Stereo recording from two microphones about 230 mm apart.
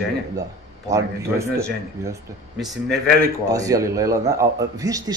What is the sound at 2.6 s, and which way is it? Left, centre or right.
Speech, centre.